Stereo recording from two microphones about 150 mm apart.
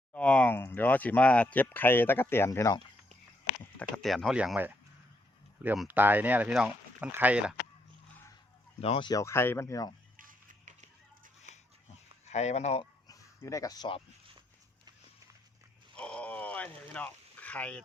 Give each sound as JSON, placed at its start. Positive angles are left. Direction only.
{"t": 0.1, "sound": "speech", "side_deg": 10}
{"t": 3.8, "sound": "speech", "side_deg": 5}
{"t": 5.7, "sound": "speech", "side_deg": 0}
{"t": 6.0, "sound": "speech", "side_deg": -10}
{"t": 8.8, "sound": "speech", "side_deg": 35}
{"t": 9.2, "sound": "speech", "side_deg": 15}
{"t": 10.2, "sound": "music", "side_deg": -60}
{"t": 12.2, "sound": "speech", "side_deg": 50}
{"t": 12.8, "sound": "a sound", "side_deg": 25}
{"t": 16.0, "sound": "a sound", "side_deg": 5}